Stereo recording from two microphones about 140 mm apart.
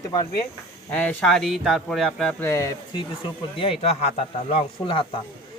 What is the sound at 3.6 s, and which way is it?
Speech, 40° left (ahead or behind).